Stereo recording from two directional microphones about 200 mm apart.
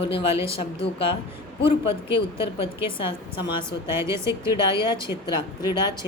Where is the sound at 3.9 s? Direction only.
15° right (ahead or behind).